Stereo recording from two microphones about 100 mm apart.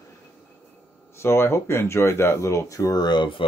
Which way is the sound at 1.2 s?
25° left (ahead or behind).